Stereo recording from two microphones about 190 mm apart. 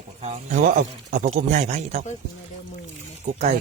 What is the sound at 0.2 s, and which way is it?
A man's voice, 40° right (ahead or behind).